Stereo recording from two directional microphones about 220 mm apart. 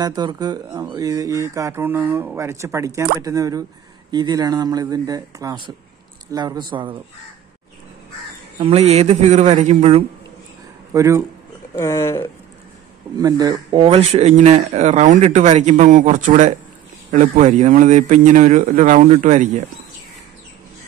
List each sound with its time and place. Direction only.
0.0 s a man's voice: 20° right (ahead or behind)
8.5 s a man's voice: 25° right (ahead or behind)
10.9 s speech: 15° right (ahead or behind)
11.7 s speech: 15° left (ahead or behind)
13.2 s speech: 15° right (ahead or behind); by 19.6 s 35° right (ahead or behind)